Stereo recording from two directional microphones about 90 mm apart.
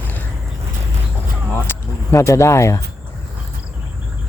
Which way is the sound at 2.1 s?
35° left (ahead or behind).